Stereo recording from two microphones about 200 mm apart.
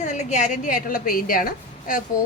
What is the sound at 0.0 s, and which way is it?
A woman's voice, 35° left (ahead or behind).